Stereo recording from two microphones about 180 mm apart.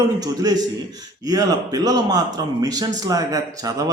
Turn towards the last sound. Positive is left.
turn(degrees=-20)  # may be behind; listen again after turning